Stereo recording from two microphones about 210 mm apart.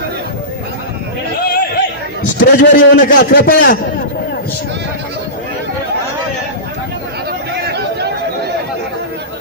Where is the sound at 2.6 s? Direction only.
40° left (ahead or behind).